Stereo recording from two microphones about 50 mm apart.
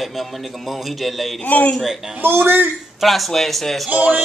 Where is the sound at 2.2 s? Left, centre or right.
Right.